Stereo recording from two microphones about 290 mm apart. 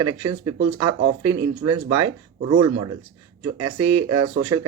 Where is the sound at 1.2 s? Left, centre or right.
Right.